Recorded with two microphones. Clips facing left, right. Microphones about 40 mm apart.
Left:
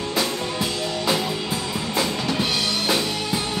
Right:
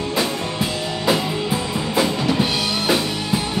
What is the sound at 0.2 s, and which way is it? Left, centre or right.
Music, centre.